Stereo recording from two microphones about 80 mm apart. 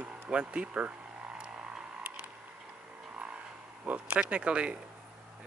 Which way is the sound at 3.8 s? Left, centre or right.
Centre.